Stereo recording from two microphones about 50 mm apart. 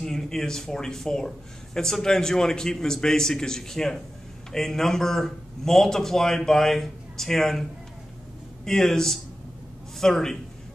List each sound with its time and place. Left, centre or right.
0.0 s speech: centre
8.6 s speech: centre